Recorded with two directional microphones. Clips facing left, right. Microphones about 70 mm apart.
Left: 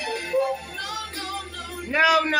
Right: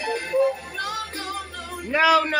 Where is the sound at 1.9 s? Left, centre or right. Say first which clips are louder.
Right 1 dB; centre.